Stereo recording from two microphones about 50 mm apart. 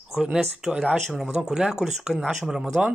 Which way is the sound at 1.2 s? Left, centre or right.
Centre.